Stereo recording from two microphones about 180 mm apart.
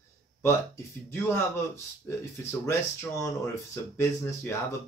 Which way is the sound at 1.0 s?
15° left (ahead or behind).